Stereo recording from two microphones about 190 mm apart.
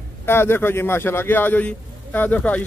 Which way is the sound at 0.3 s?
10° left (ahead or behind).